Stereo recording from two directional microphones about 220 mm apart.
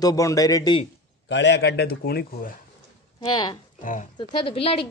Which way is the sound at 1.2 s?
55° left (ahead or behind).